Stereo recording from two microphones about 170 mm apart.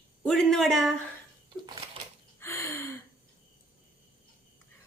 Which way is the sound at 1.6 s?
25° right (ahead or behind).